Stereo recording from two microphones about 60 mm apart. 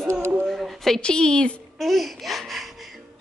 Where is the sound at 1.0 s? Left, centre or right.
Centre.